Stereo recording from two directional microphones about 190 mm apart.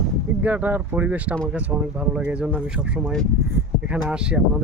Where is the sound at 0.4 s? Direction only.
10° right (ahead or behind).